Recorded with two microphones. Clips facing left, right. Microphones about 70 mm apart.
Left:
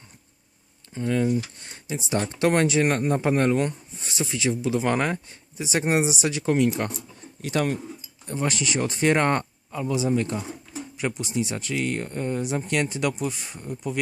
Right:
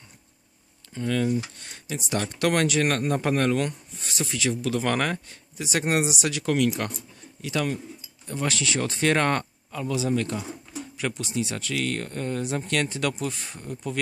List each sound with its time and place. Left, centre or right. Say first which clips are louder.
0.9 s speech: left 2 dB; left
7.4 s speech: left 2 dB; left
8.3 s speech: left 1 dB; left